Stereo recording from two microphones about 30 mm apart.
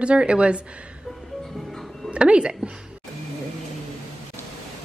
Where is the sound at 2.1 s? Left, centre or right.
Right.